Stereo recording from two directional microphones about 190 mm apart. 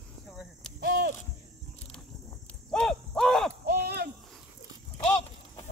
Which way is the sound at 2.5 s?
5° left (ahead or behind).